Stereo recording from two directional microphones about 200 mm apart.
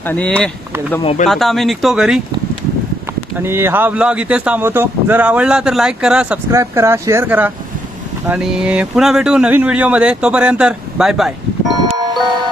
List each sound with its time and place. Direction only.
0.0 s speech: 10° left (ahead or behind)
1.0 s speech: 35° left (ahead or behind)
1.3 s speech: centre (ahead or behind)
3.4 s speech: 10° right (ahead or behind)